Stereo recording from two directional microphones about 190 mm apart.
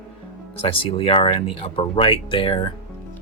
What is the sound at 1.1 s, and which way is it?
Speech, 30° left (ahead or behind).